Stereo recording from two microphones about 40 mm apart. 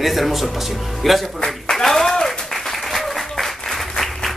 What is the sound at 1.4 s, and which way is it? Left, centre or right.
Applause, centre.